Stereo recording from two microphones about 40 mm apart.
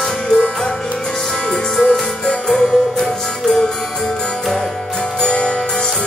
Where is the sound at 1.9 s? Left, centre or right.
Centre.